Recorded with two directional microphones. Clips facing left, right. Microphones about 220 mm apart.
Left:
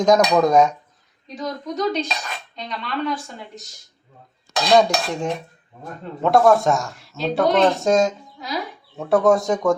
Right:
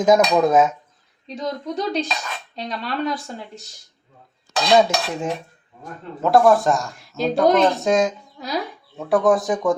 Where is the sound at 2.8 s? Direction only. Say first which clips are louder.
Even; 40° right (ahead or behind).